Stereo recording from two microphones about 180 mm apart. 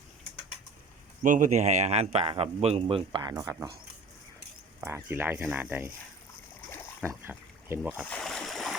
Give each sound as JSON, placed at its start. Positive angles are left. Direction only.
{"t": 1.2, "sound": "speech", "side_deg": -45}
{"t": 4.8, "sound": "speech", "side_deg": -15}
{"t": 7.0, "sound": "a sound", "side_deg": -15}
{"t": 7.8, "sound": "speech", "side_deg": -5}
{"t": 8.1, "sound": "boat", "side_deg": 0}